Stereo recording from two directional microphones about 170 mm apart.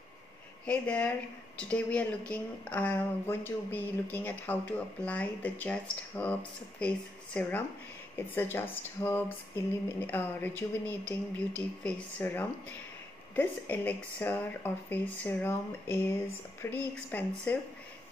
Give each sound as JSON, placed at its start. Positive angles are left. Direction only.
{"t": 0.7, "sound": "speech", "side_deg": 5}